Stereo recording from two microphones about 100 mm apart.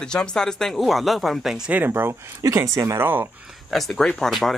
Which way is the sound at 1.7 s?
20° right (ahead or behind).